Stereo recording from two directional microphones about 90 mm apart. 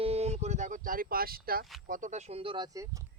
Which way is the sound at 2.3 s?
75° right (ahead or behind).